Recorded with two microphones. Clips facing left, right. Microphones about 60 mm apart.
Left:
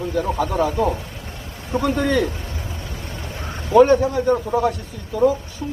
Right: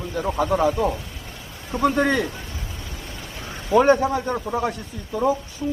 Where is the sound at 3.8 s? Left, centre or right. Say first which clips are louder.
Left 2 dB; right.